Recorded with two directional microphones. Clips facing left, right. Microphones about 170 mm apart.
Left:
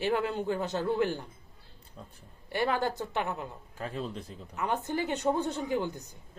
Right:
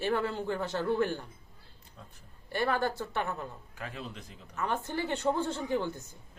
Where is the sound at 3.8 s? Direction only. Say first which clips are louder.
Left 6 dB; 30° left (ahead or behind).